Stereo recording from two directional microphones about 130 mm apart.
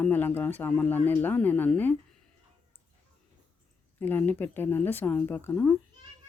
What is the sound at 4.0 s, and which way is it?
Speech, 15° left (ahead or behind).